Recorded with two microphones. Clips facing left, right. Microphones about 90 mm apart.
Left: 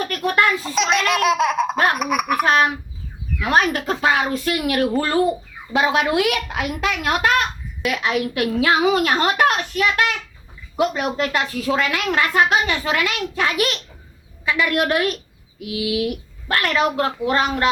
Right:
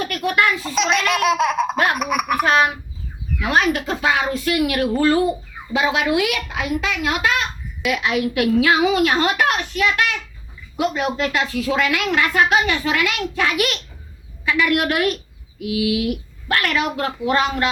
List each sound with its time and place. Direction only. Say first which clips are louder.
0.0 s a child's voice: even; 35° left (ahead or behind)
0.6 s laughter: even; centre (ahead or behind)
2.0 s a sound: even; centre (ahead or behind)
3.5 s a woman's voice: even; 40° left (ahead or behind)
11.2 s a woman's voice: right 1 dB; 35° left (ahead or behind)